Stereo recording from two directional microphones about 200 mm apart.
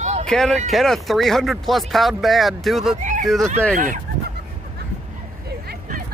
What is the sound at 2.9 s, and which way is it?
Speech, 40° right (ahead or behind).